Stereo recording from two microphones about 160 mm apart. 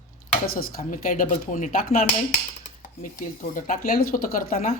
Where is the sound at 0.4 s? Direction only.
65° left (ahead or behind).